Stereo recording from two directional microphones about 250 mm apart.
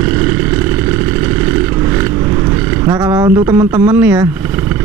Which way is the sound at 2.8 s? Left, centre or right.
Centre.